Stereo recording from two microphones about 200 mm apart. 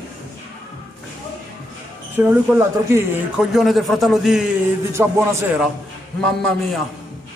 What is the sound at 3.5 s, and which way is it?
A man's voice, centre (ahead or behind).